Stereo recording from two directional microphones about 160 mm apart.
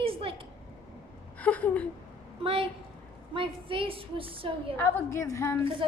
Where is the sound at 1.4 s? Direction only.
10° left (ahead or behind).